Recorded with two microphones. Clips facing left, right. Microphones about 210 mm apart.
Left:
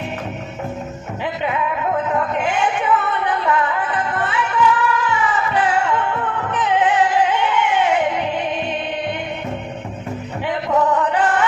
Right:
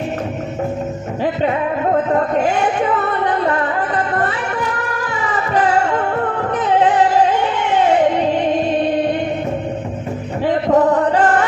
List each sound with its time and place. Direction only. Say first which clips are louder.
1.2 s music: right 5 dB; 40° right (ahead or behind)
10.4 s chant: right 5 dB; 40° right (ahead or behind)